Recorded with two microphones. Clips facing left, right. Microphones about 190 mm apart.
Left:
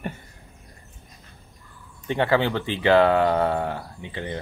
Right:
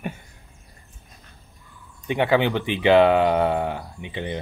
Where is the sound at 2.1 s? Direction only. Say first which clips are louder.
Right 1 dB; 15° right (ahead or behind).